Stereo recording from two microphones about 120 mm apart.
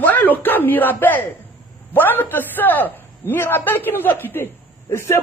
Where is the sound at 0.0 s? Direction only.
15° left (ahead or behind).